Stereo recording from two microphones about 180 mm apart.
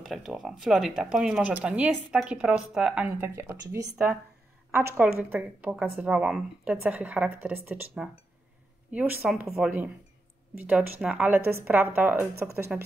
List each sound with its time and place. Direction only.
0.0 s speech: centre (ahead or behind)